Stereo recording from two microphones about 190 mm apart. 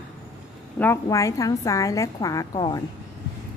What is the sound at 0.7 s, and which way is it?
A woman's voice, 15° left (ahead or behind).